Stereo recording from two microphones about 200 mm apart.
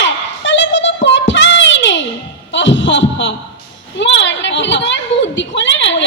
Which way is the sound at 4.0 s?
65° left (ahead or behind).